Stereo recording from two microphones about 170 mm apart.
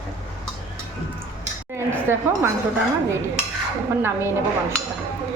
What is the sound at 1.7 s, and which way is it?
Speech, 15° right (ahead or behind).